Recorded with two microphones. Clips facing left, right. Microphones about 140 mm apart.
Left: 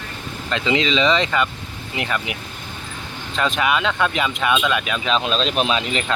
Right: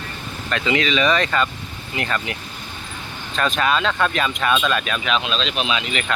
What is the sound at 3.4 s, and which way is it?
Speech, 15° left (ahead or behind).